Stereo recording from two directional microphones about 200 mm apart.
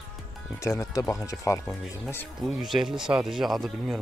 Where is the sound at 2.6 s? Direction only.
Centre (ahead or behind).